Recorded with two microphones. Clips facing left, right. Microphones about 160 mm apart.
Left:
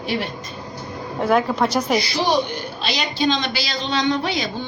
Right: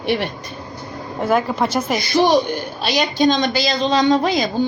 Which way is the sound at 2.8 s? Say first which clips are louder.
Right 5 dB; 45° right (ahead or behind).